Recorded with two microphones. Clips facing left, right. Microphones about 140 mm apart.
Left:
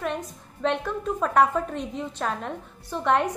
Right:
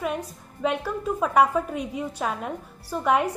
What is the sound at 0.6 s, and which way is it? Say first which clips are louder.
A woman's voice: even; 5° right (ahead or behind).